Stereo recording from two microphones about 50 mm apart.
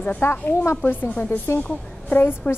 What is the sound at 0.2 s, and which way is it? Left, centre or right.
Speech, left.